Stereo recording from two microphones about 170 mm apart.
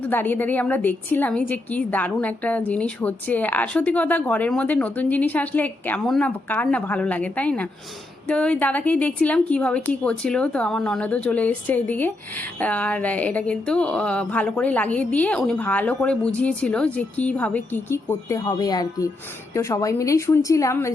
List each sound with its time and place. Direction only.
0.0 s a woman's voice: 10° left (ahead or behind)